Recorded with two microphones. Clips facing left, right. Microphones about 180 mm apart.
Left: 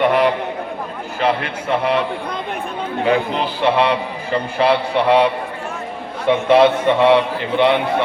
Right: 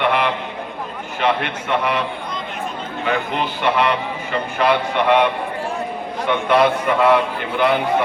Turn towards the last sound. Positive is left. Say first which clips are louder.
# left 3 dB
turn(degrees=30)  # may be behind; listen again after turning